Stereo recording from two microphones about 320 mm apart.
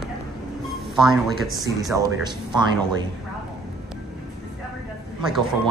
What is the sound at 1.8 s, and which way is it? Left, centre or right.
Speech, centre.